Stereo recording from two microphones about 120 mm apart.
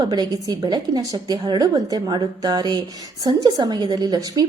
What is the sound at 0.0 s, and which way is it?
A woman's voice, 35° right (ahead or behind).